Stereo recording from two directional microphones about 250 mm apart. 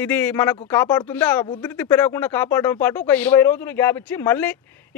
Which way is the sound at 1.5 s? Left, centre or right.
Centre.